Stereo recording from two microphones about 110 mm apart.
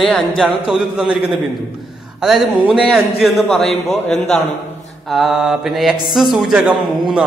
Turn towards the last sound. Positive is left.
turn(degrees=-10)  # may be behind; listen again after turning